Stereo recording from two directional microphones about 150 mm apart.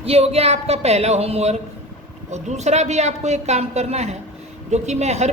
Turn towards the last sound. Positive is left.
turn(degrees=-50)  # may be behind; listen again after turning